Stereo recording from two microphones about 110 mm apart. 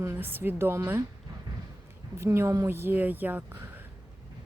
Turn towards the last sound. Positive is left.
turn(degrees=-15)  # may be behind; listen again after turning